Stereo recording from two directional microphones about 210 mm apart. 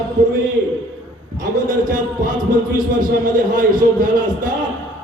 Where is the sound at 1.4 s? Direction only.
40° right (ahead or behind).